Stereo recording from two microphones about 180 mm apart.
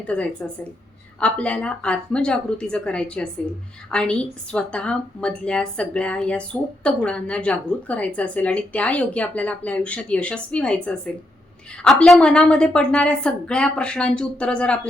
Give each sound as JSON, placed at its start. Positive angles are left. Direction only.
{"t": 0.0, "sound": "a woman's voice", "side_deg": 5}
{"t": 11.8, "sound": "a woman's voice", "side_deg": 5}